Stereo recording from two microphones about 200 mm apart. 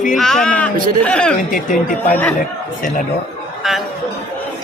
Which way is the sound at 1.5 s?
45° left (ahead or behind).